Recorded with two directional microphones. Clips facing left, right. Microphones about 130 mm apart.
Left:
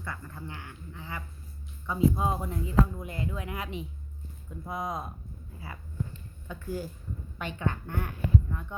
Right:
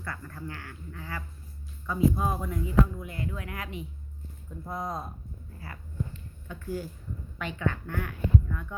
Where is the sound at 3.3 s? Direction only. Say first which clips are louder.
Left 2 dB; 20° left (ahead or behind).